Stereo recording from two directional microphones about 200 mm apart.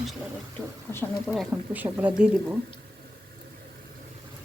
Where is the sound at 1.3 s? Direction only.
5° right (ahead or behind).